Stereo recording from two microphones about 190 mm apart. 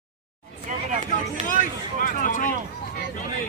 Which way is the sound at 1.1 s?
45° left (ahead or behind).